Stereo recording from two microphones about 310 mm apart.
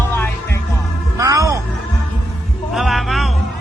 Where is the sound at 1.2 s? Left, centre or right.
Centre.